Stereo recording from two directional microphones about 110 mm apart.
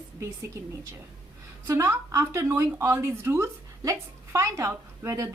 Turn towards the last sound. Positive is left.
turn(degrees=-30)  # may be behind; listen again after turning